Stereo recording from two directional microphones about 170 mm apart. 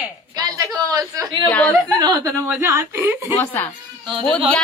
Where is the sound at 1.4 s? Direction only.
10° left (ahead or behind).